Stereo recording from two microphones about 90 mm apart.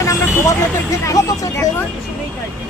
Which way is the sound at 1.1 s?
40° left (ahead or behind).